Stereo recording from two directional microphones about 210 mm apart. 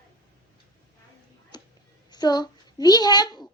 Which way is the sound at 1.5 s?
20° left (ahead or behind).